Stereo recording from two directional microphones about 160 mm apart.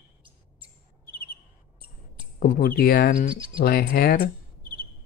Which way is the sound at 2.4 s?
65° left (ahead or behind).